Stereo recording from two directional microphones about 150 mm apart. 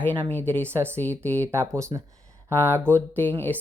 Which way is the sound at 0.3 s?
10° left (ahead or behind).